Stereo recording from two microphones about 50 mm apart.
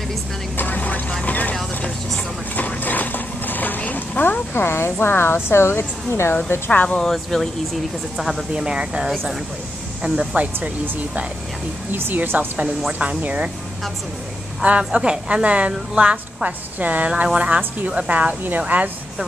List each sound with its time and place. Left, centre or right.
0.6 s vehicle: left
2.5 s speech: left
6.7 s speech: left
7.0 s speech: centre
8.5 s a woman's voice: centre
11.9 s speech: right
13.2 s a woman's voice: right
14.6 s a woman's voice: right
18.7 s speech: right